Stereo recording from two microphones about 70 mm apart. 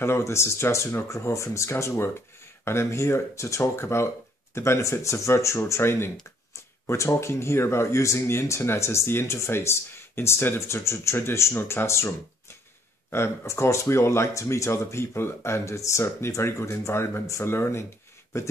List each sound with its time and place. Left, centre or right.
0.0 s speech: left